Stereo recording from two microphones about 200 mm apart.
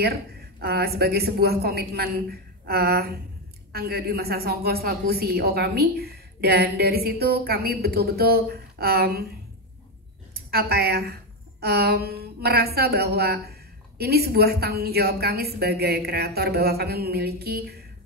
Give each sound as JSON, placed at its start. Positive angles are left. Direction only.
{"t": 0.0, "sound": "a woman's voice", "side_deg": -50}
{"t": 10.3, "sound": "a woman's voice", "side_deg": -50}